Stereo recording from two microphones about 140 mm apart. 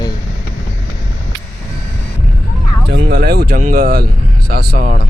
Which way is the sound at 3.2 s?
90° right.